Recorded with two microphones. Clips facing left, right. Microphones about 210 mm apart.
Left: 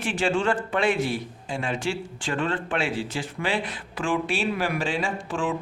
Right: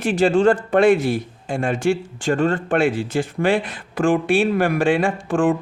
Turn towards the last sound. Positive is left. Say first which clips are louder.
# right 9 dB
turn(degrees=-50)  # may be behind; listen again after turning